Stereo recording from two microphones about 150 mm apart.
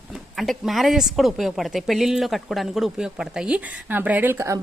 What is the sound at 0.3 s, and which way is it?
Speech, centre (ahead or behind).